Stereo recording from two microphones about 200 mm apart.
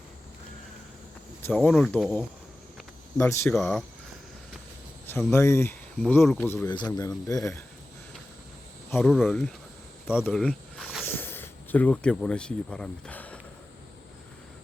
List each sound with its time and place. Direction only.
1.4 s speech: 10° left (ahead or behind)
1.7 s speech: centre (ahead or behind)
3.2 s speech: 15° left (ahead or behind)
3.5 s speech: centre (ahead or behind)
5.0 s speech: 10° left (ahead or behind)
9.0 s speech: centre (ahead or behind)
10.3 s a sound: 5° left (ahead or behind)